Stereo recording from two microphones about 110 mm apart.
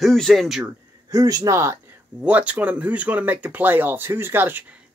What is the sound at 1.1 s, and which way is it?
Speech, 35° right (ahead or behind).